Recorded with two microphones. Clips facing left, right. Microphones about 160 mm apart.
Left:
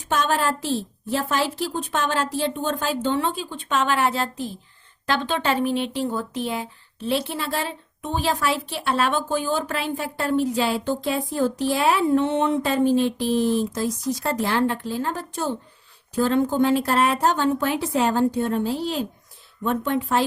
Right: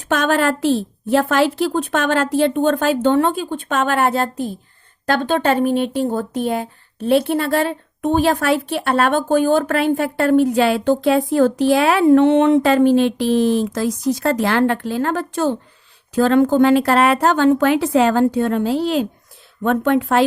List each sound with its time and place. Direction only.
0.0 s a woman's voice: 70° right (ahead or behind)